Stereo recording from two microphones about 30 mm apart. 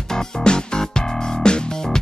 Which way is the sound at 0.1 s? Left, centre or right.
Left.